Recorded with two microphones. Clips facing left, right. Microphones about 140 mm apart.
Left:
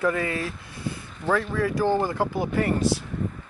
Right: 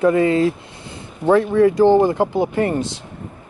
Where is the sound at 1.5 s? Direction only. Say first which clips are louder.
Right 12 dB; 20° right (ahead or behind).